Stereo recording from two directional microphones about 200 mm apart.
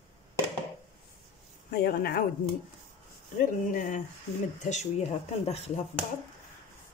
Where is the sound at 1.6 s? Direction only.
50° left (ahead or behind).